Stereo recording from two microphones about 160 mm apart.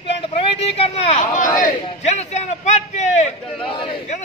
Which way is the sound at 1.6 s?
45° left (ahead or behind).